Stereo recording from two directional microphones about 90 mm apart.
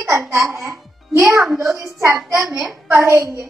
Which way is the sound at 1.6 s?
30° right (ahead or behind).